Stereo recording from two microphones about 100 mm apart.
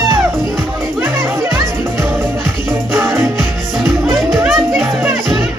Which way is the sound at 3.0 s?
30° right (ahead or behind).